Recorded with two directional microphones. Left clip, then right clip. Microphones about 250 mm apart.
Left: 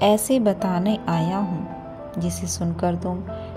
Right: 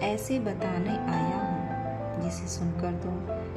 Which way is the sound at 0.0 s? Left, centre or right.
Left.